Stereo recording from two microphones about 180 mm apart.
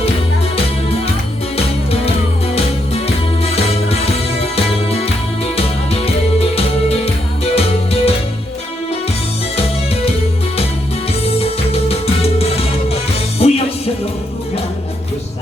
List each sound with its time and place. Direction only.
3.4 s music: 35° left (ahead or behind)
11.3 s music: 35° left (ahead or behind)